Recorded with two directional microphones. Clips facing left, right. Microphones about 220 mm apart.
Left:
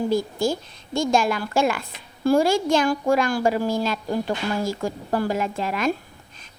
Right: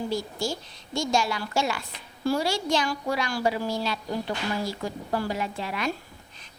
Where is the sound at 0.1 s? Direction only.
55° left (ahead or behind).